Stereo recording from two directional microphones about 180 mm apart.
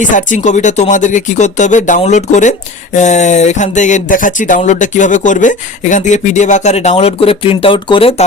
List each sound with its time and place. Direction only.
0.0 s speech: 45° left (ahead or behind); by 8.1 s 30° left (ahead or behind)